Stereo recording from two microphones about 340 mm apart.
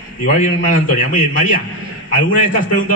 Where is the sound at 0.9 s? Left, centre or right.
Left.